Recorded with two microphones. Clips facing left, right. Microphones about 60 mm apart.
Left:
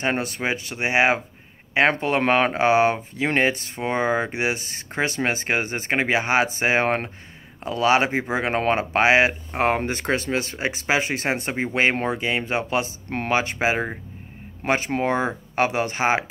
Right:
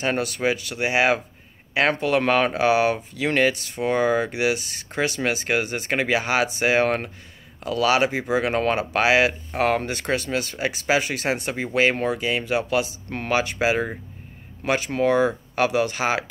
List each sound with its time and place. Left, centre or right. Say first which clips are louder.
0.0 s speech: right 1 dB; left